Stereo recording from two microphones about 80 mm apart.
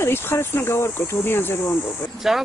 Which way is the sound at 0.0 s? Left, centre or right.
Left.